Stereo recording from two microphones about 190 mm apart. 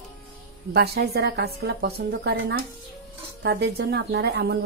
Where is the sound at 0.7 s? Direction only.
60° right (ahead or behind).